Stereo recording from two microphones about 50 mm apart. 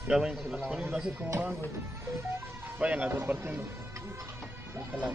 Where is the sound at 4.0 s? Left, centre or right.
Right.